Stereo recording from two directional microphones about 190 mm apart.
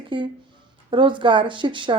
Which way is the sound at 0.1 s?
25° right (ahead or behind).